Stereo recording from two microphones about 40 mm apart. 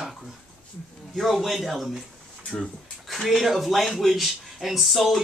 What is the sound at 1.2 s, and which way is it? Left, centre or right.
Speech, centre.